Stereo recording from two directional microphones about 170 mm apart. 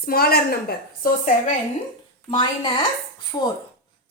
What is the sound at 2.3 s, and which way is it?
Speech, 25° left (ahead or behind).